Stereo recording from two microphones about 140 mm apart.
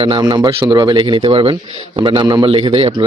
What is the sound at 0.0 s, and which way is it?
Speech, 35° right (ahead or behind).